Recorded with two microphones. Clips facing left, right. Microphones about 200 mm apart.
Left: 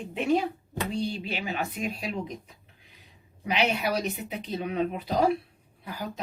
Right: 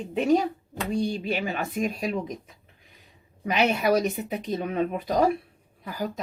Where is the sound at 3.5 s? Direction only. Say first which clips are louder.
Right 4 dB; 45° right (ahead or behind).